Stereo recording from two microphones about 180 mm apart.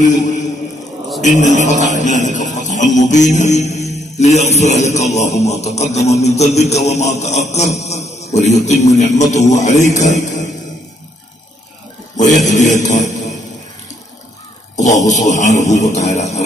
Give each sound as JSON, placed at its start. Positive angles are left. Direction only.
{"t": 0.0, "sound": "a man's voice", "side_deg": 45}
{"t": 2.0, "sound": "music", "side_deg": 45}
{"t": 4.9, "sound": "speech", "side_deg": 40}
{"t": 10.1, "sound": "music", "side_deg": 45}
{"t": 12.2, "sound": "speech", "side_deg": 40}
{"t": 14.8, "sound": "speech", "side_deg": 40}